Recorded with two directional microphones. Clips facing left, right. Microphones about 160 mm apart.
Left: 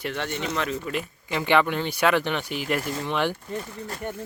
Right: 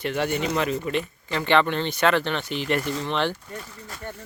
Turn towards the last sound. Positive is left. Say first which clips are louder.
# left 5 dB
turn(degrees=15)  # may be behind; listen again after turning